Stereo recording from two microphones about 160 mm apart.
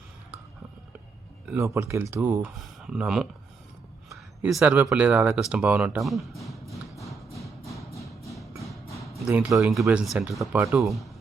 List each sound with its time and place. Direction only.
1.5 s speech: 20° right (ahead or behind)
4.4 s speech: 5° right (ahead or behind)
7.8 s music: 20° left (ahead or behind)
8.2 s music: centre (ahead or behind)
9.1 s speech: 5° right (ahead or behind)
10.8 s speech: centre (ahead or behind)